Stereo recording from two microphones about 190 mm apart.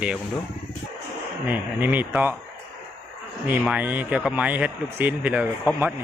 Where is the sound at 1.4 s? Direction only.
10° right (ahead or behind).